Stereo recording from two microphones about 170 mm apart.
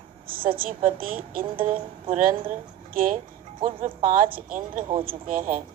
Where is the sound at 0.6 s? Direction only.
55° right (ahead or behind).